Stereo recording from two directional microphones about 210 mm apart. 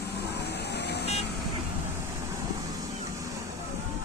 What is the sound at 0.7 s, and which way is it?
Vehicle, 50° left (ahead or behind).